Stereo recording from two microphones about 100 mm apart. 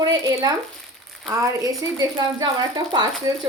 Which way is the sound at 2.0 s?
40° right (ahead or behind).